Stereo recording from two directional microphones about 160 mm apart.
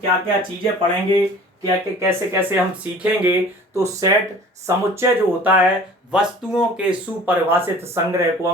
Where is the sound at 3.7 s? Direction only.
20° right (ahead or behind).